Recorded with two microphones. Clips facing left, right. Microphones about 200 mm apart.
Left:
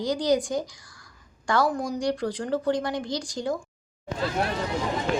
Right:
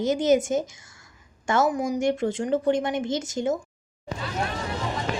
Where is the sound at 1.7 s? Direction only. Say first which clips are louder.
Right 3 dB; 10° right (ahead or behind).